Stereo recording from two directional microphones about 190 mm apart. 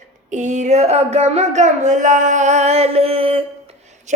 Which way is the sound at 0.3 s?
40° right (ahead or behind).